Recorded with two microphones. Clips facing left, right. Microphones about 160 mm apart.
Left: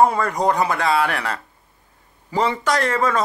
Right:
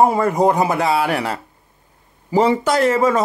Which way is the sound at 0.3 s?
10° right (ahead or behind).